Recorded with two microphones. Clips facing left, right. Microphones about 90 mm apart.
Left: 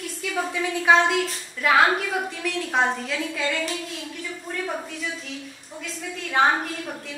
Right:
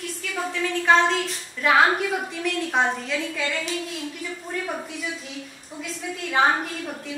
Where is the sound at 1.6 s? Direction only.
Centre (ahead or behind).